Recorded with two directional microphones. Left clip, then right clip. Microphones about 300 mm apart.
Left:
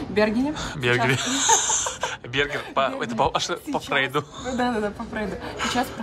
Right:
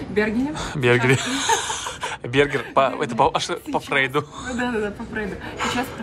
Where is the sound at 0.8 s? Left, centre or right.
Centre.